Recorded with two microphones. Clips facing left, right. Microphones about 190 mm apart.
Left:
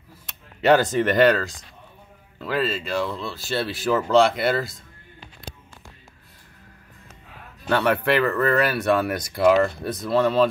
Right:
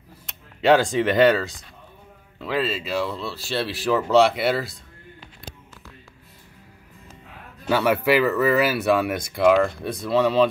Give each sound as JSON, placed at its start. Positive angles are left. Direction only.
{"t": 0.6, "sound": "speech", "side_deg": 0}
{"t": 7.6, "sound": "speech", "side_deg": -5}